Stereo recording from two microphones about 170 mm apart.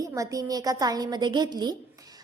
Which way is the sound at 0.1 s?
20° right (ahead or behind).